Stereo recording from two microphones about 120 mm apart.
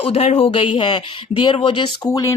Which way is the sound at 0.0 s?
60° left (ahead or behind).